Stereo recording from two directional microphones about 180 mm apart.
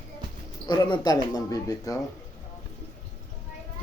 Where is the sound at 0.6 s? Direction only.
25° left (ahead or behind).